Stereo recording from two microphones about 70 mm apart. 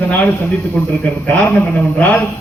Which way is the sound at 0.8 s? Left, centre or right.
Centre.